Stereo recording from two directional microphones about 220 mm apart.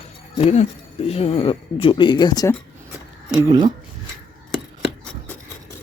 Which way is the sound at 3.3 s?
15° right (ahead or behind).